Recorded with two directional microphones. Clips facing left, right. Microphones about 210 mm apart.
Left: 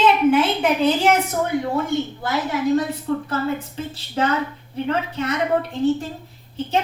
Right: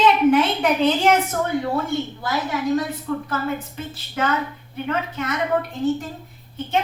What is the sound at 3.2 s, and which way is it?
A woman's voice, 30° left (ahead or behind).